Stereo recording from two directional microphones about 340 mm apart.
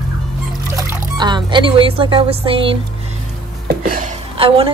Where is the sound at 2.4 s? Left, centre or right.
Centre.